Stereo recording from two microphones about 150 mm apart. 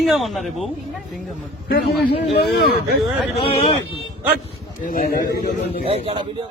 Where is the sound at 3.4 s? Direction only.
40° left (ahead or behind).